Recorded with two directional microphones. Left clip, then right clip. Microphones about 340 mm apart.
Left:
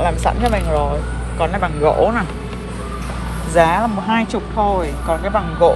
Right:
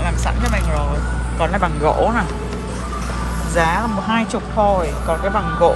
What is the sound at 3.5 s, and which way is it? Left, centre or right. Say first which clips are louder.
Speech: left 4 dB; centre.